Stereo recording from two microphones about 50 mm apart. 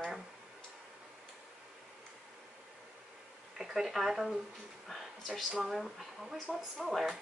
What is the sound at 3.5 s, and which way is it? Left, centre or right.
Speech, centre.